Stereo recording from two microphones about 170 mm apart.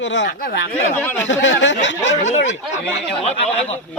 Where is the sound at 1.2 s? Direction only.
90° left.